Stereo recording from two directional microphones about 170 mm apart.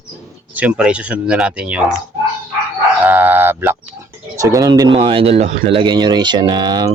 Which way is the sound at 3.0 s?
10° right (ahead or behind).